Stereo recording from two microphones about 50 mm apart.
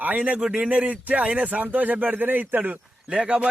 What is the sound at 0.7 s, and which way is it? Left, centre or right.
A man's voice, right.